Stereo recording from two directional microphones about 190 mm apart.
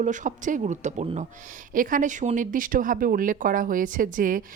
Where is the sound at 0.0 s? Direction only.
40° right (ahead or behind).